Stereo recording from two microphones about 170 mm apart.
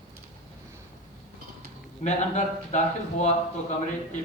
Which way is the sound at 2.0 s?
45° left (ahead or behind).